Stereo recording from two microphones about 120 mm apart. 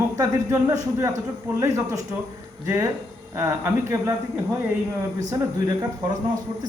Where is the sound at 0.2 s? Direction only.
25° right (ahead or behind).